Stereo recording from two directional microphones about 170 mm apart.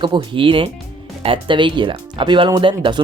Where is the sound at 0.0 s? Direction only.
30° right (ahead or behind).